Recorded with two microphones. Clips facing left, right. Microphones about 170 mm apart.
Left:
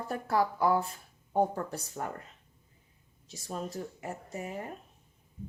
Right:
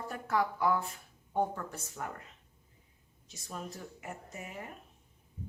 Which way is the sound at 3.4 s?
35° left (ahead or behind).